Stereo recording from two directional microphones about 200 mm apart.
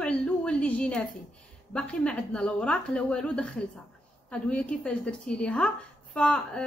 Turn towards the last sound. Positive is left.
turn(degrees=5)  # may be behind; listen again after turning